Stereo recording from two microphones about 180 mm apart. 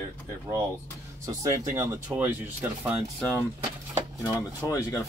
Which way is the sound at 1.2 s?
20° right (ahead or behind).